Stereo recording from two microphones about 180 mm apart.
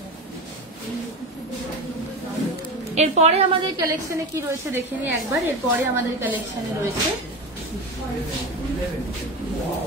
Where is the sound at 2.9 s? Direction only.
35° right (ahead or behind).